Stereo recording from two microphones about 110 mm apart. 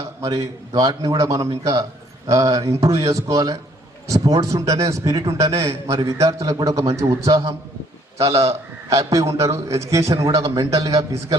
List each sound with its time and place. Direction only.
0.2 s a man's voice: 30° right (ahead or behind)
8.3 s a man's voice: 65° right (ahead or behind)
8.9 s a man's voice: 30° right (ahead or behind)